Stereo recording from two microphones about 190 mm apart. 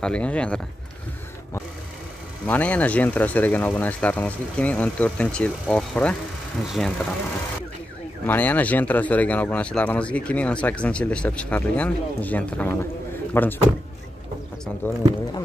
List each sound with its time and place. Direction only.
0.0 s speech: 5° left (ahead or behind)
2.4 s speech: 10° left (ahead or behind)
8.3 s speech: 10° left (ahead or behind)
14.8 s speech: 10° left (ahead or behind)